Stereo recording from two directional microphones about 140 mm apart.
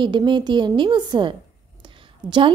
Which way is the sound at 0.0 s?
35° right (ahead or behind).